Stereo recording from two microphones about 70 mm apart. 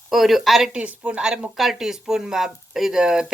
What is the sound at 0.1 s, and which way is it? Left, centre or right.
Speech, centre.